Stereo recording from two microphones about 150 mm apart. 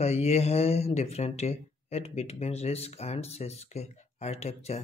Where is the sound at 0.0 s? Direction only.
45° left (ahead or behind).